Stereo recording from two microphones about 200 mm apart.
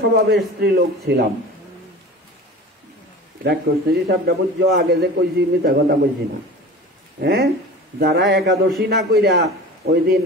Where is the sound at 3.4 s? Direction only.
50° right (ahead or behind).